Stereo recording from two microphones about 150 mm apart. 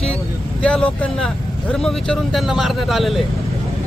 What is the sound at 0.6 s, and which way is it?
Speech, 5° left (ahead or behind).